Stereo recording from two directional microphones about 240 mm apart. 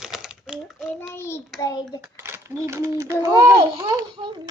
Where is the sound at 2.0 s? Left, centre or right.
Centre.